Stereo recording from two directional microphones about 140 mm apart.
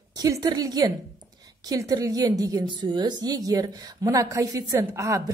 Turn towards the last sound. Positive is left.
turn(degrees=-20)  # may be behind; listen again after turning